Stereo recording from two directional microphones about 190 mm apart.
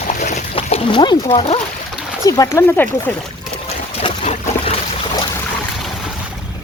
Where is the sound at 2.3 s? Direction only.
15° left (ahead or behind).